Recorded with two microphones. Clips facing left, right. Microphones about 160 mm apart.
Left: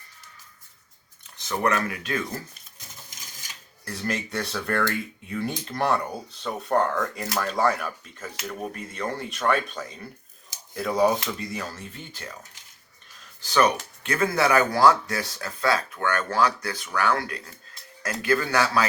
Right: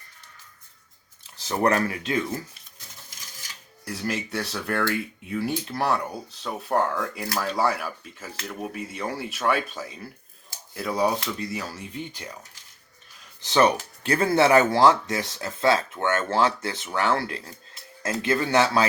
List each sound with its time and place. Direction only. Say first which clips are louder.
1.2 s speech: right 2 dB; 30° right (ahead or behind)
3.8 s speech: even; 5° right (ahead or behind)
11.7 s speech: right 5 dB; 15° right (ahead or behind)
13.4 s speech: right 2 dB; 25° right (ahead or behind)